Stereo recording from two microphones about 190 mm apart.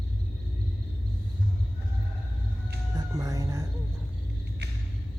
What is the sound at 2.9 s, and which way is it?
Music, 20° right (ahead or behind).